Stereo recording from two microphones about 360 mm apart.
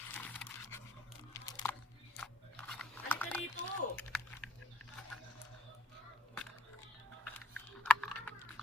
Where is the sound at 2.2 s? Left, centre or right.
Centre.